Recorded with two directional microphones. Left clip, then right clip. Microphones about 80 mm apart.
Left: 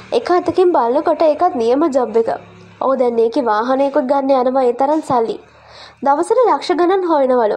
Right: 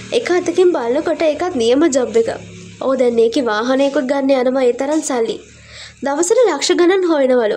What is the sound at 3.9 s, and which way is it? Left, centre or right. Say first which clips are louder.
Speech: left 2 dB; centre.